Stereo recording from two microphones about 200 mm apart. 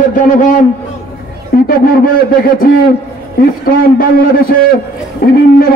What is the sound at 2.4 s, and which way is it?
Speech, 45° left (ahead or behind).